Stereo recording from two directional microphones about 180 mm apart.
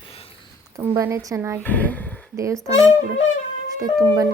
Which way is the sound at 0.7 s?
15° right (ahead or behind).